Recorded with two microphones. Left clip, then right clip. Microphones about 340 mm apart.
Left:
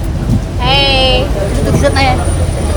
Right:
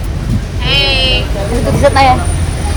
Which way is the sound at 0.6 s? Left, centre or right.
Left.